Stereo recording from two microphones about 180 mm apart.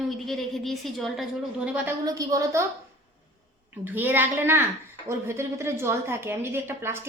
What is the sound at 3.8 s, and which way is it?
A woman's voice, 10° right (ahead or behind).